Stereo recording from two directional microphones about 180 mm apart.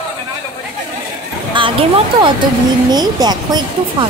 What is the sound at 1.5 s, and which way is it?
Speech, 30° right (ahead or behind).